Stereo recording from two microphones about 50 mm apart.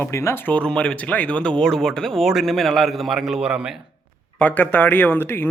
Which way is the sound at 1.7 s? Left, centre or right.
Centre.